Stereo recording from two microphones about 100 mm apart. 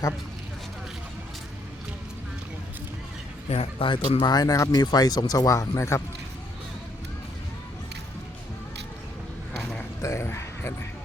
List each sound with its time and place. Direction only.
3.5 s speech: 90° left
3.8 s speech: 60° left (ahead or behind)
4.3 s speech: 40° left (ahead or behind)
10.0 s a sound: 30° left (ahead or behind)